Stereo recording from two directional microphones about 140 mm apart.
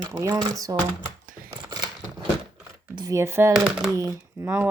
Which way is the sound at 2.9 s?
25° right (ahead or behind).